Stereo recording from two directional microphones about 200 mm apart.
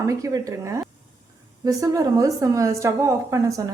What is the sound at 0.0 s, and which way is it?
A woman's voice, 15° right (ahead or behind).